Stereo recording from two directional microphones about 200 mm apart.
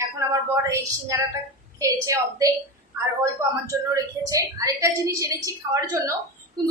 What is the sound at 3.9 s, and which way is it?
A woman's voice, 15° right (ahead or behind).